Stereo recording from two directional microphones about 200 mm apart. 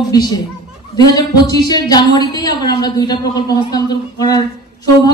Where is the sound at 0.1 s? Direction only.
20° left (ahead or behind).